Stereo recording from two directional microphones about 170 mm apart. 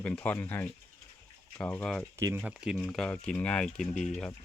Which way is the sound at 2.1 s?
15° right (ahead or behind).